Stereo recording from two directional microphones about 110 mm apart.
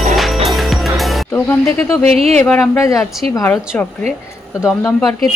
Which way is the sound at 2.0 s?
70° right (ahead or behind).